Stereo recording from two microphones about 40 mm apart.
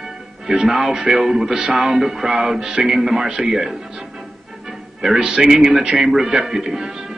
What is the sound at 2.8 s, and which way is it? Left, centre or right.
Speech, right.